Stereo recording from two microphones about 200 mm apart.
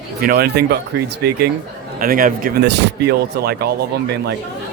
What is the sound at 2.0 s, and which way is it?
Speech, 45° right (ahead or behind).